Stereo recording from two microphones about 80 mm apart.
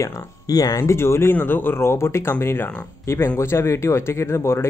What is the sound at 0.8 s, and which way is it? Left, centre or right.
Speech, left.